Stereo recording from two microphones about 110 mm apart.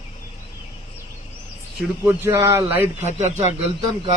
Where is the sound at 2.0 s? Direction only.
25° right (ahead or behind).